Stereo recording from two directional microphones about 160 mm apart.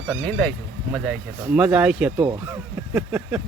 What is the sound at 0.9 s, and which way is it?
Speech, 5° right (ahead or behind).